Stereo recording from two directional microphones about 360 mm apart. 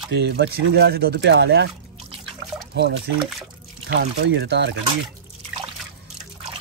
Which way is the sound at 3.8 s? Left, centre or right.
Right.